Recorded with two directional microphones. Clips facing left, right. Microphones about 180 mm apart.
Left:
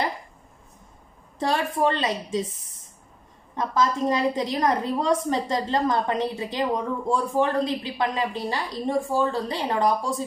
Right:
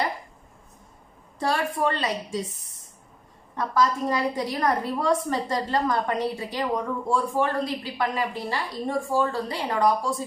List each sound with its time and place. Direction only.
1.4 s a woman's voice: 20° left (ahead or behind)
3.5 s a woman's voice: 20° left (ahead or behind)